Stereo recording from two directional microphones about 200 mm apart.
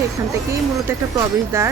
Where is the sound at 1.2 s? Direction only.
15° right (ahead or behind).